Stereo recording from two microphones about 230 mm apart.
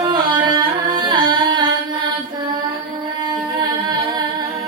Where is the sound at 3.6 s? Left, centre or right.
Centre.